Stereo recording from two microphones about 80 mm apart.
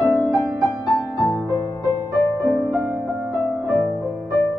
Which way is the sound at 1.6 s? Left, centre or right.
Left.